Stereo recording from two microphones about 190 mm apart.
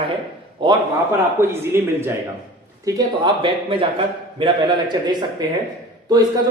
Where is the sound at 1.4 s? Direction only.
15° right (ahead or behind).